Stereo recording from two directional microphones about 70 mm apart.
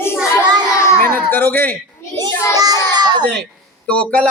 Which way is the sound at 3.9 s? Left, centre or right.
Centre.